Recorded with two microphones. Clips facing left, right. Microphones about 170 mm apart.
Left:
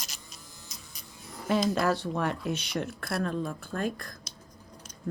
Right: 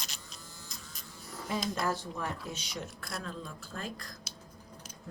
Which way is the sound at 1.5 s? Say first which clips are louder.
Left 7 dB; 70° left (ahead or behind).